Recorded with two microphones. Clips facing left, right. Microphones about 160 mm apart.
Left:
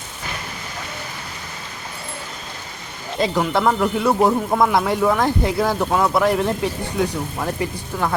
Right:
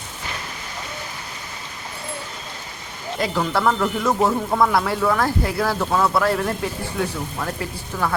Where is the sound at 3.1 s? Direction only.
25° left (ahead or behind).